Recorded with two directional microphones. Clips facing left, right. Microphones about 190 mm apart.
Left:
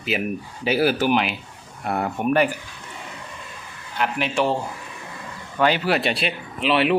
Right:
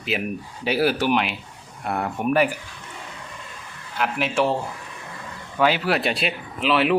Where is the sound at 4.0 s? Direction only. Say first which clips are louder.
Even; centre (ahead or behind).